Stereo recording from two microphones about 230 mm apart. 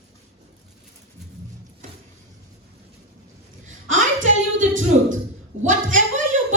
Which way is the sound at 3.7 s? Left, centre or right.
Right.